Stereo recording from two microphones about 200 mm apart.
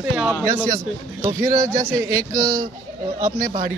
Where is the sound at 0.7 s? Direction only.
15° right (ahead or behind).